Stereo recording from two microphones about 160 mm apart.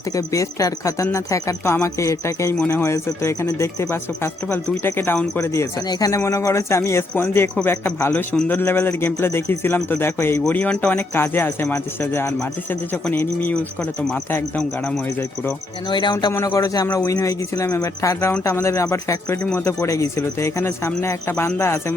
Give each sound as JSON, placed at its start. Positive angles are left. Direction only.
{"t": 0.2, "sound": "speech", "side_deg": 20}
{"t": 15.9, "sound": "speech", "side_deg": 30}